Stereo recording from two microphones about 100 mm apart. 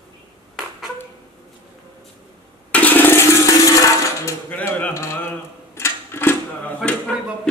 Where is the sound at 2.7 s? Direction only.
15° left (ahead or behind).